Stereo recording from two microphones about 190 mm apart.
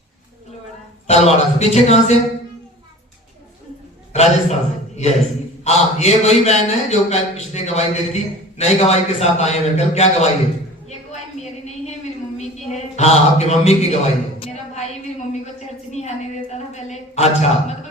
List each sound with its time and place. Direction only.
1.0 s a man's voice: 35° left (ahead or behind)
4.1 s a man's voice: 35° left (ahead or behind)
12.7 s a man's voice: 35° left (ahead or behind)
15.9 s a sound: 35° left (ahead or behind)